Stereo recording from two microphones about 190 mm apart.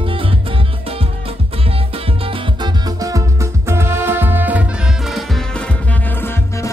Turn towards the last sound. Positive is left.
turn(degrees=0)  # may be behind; listen again after turning